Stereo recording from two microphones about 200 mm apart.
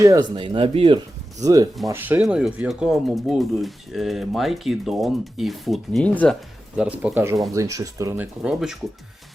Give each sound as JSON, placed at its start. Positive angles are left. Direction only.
{"t": 0.0, "sound": "speech", "side_deg": -20}
{"t": 1.9, "sound": "speech", "side_deg": -10}
{"t": 6.7, "sound": "speech", "side_deg": -5}